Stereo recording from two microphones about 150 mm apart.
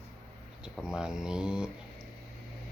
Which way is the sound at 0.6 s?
5° right (ahead or behind).